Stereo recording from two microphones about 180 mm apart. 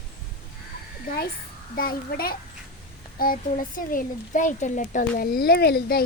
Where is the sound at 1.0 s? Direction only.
55° left (ahead or behind).